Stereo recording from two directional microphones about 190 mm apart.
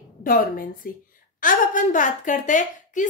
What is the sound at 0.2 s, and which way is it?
A woman's voice, 50° left (ahead or behind).